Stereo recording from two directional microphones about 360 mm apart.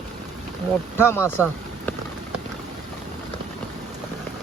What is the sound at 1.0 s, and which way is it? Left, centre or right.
Speech, centre.